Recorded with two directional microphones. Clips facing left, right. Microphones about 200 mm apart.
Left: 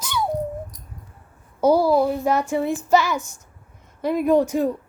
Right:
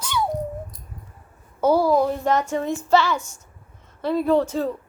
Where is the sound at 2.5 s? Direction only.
10° left (ahead or behind).